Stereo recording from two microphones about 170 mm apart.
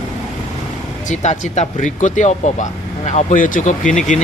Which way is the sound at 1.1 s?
45° left (ahead or behind).